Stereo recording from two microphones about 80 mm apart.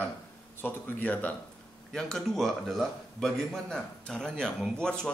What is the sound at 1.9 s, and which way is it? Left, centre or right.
A man's voice, centre.